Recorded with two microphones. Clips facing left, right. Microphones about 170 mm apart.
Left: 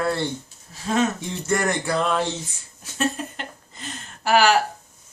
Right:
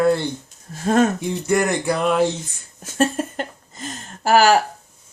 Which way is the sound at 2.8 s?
45° right (ahead or behind).